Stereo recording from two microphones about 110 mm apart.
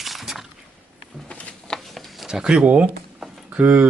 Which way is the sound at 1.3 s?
10° left (ahead or behind).